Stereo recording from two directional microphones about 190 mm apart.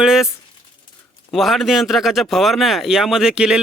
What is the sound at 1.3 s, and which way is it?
Speech, centre (ahead or behind).